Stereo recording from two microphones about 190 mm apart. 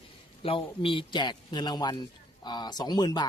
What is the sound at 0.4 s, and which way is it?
A man's voice, 30° left (ahead or behind).